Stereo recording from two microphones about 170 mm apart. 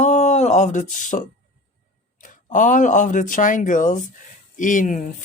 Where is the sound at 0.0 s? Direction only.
45° left (ahead or behind).